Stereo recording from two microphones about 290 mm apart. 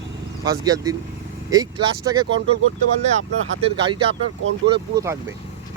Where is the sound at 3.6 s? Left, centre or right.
Centre.